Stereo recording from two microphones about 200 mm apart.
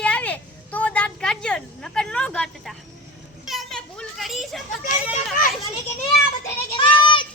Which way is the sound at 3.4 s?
Centre (ahead or behind).